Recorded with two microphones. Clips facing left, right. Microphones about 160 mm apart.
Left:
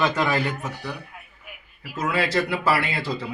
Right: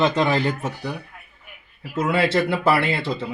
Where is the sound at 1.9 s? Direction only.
25° right (ahead or behind).